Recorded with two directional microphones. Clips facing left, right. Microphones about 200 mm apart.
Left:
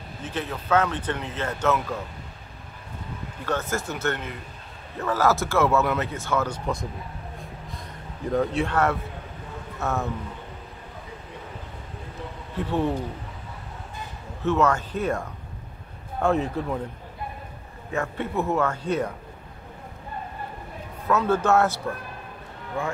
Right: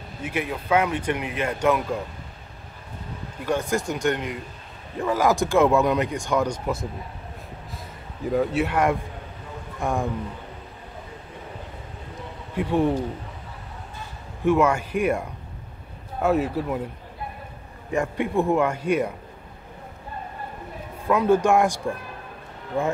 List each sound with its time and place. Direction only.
0.2 s speech: 10° right (ahead or behind)
3.4 s speech: 15° right (ahead or behind)
6.6 s speech: 5° right (ahead or behind)
7.7 s a sound: 5° right (ahead or behind)
9.8 s speech: 15° right (ahead or behind)
12.5 s speech: 10° right (ahead or behind)
14.4 s speech: 10° right (ahead or behind)
17.9 s speech: 15° right (ahead or behind)
21.1 s speech: 15° right (ahead or behind)